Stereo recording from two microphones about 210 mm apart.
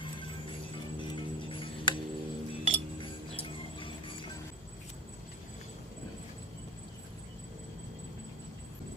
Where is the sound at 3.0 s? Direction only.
25° left (ahead or behind).